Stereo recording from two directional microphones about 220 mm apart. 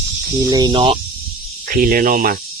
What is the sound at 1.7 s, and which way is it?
Speech, 40° right (ahead or behind).